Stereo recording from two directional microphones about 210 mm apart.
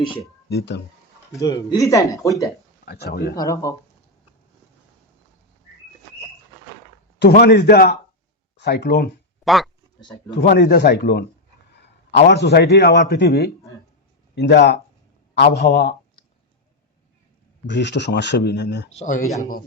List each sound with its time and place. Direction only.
0.4 s speech: 55° left (ahead or behind)
1.4 s speech: 15° left (ahead or behind)
2.8 s a man's voice: 50° left (ahead or behind)
3.3 s speech: 15° left (ahead or behind)
7.2 s a man's voice: 50° left (ahead or behind)
9.4 s speech: centre (ahead or behind)
10.0 s speech: 20° left (ahead or behind)
10.3 s a man's voice: 55° left (ahead or behind)
17.7 s speech: 55° left (ahead or behind)
18.9 s speech: 35° left (ahead or behind)